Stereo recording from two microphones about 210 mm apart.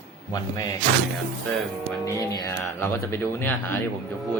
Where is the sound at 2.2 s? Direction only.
10° left (ahead or behind).